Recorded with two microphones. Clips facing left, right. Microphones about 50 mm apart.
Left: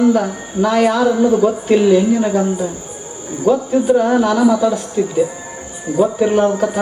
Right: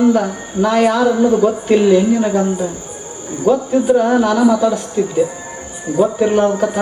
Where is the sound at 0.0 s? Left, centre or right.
Centre.